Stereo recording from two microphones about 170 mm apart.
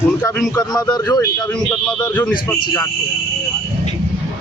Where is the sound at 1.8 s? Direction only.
10° left (ahead or behind).